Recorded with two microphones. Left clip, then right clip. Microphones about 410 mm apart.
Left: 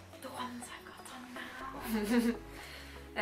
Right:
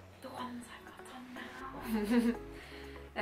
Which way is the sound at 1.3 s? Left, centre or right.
Centre.